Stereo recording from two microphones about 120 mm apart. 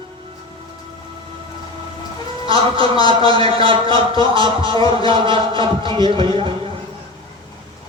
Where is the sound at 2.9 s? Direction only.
45° right (ahead or behind).